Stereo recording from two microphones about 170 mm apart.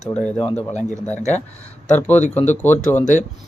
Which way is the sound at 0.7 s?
45° left (ahead or behind).